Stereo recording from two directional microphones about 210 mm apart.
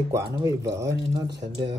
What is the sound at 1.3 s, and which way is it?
Speech, 55° right (ahead or behind).